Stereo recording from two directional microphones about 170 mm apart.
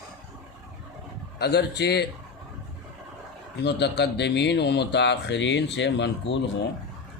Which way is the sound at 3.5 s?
80° left.